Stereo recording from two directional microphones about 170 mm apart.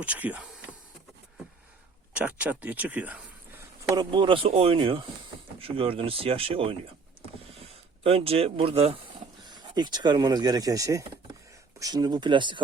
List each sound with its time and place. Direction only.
0.0 s speech: 10° right (ahead or behind)
2.1 s speech: 10° right (ahead or behind)
3.9 s speech: 30° right (ahead or behind)
8.0 s speech: 35° right (ahead or behind)